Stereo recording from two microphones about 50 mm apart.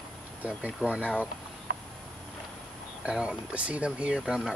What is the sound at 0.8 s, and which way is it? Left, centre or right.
Speech, right.